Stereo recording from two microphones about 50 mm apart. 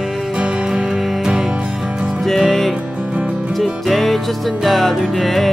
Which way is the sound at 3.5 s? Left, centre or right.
Centre.